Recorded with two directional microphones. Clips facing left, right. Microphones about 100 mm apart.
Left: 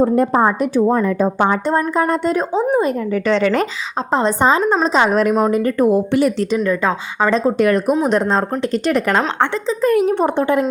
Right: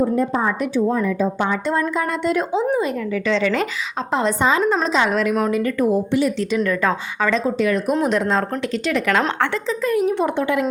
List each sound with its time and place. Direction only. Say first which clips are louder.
0.0 s speech: left 5 dB; 60° left (ahead or behind)
0.4 s speech: left 5 dB; 40° left (ahead or behind)
0.9 s a woman's voice: left 4 dB; 55° left (ahead or behind)
2.0 s a woman's voice: left 4 dB; 40° left (ahead or behind)
4.1 s speech: left 4 dB; 35° left (ahead or behind)
6.7 s a woman's voice: left 2 dB; 25° left (ahead or behind)
7.3 s speech: left 4 dB; 40° left (ahead or behind)
7.6 s speech: left 5 dB; 55° left (ahead or behind)
8.1 s speech: left 3 dB; 30° left (ahead or behind)
8.7 s a woman's voice: left 3 dB; 45° left (ahead or behind)
9.8 s speech: left 5 dB; 55° left (ahead or behind)
10.2 s speech: left 4 dB; 35° left (ahead or behind)